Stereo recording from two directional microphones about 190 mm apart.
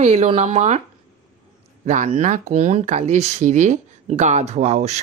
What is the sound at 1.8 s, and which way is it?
Speech, 40° right (ahead or behind).